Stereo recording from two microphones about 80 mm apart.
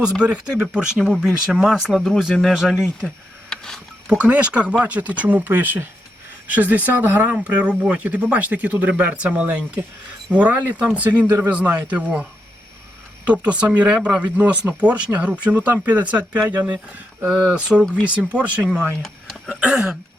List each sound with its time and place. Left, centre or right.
0.0 s speech: centre
3.5 s a sound: centre
4.0 s speech: centre
19.0 s speech: centre
19.5 s speech: centre